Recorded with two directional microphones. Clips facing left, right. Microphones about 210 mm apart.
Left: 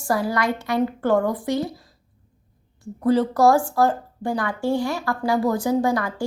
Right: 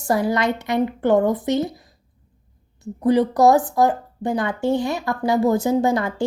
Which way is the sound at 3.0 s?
15° right (ahead or behind).